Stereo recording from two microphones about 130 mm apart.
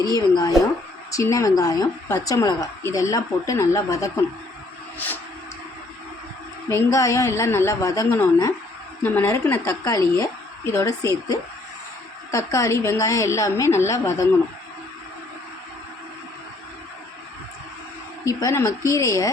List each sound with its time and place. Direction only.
0.1 s a woman's voice: 30° left (ahead or behind)
4.9 s a sound: 15° left (ahead or behind)
6.7 s a woman's voice: 20° left (ahead or behind)
18.3 s a woman's voice: 25° left (ahead or behind)